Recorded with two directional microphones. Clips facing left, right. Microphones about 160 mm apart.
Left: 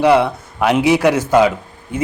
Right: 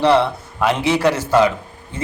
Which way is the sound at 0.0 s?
10° left (ahead or behind).